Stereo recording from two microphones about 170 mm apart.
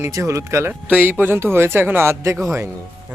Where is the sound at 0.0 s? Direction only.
15° right (ahead or behind).